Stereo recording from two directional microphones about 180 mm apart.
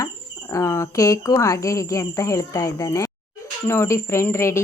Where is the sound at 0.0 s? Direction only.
15° left (ahead or behind).